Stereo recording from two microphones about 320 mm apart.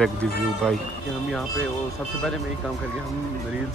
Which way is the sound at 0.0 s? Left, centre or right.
Centre.